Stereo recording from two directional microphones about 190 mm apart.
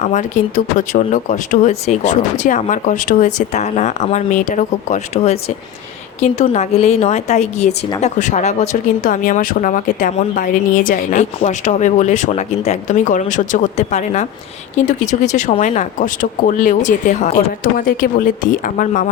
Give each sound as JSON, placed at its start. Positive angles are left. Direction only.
{"t": 0.0, "sound": "speech", "side_deg": 40}
{"t": 17.6, "sound": "speech", "side_deg": 50}